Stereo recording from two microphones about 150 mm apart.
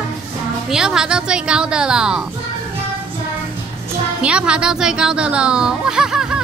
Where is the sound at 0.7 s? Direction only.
5° right (ahead or behind).